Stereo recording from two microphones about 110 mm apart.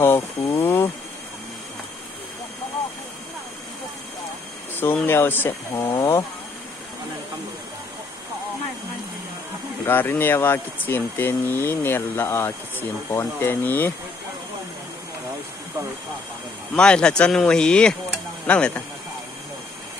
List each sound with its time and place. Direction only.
0.0 s a sound: 25° left (ahead or behind)
4.7 s speech: 20° left (ahead or behind)
9.8 s speech: 20° left (ahead or behind)
16.7 s speech: 10° left (ahead or behind)